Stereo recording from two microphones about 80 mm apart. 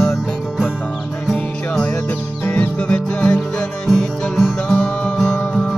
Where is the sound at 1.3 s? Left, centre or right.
Left.